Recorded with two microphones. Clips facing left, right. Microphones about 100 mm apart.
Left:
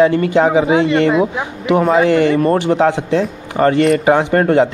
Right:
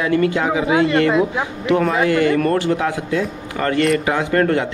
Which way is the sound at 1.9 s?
30° left (ahead or behind).